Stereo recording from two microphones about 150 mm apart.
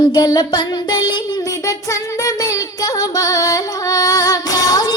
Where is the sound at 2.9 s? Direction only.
25° left (ahead or behind).